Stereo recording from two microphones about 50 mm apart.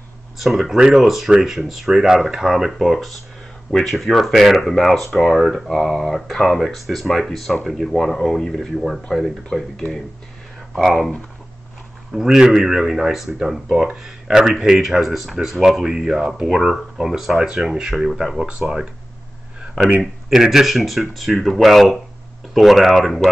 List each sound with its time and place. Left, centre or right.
0.4 s speech: centre
10.9 s speech: centre
12.1 s speech: centre
20.0 s speech: centre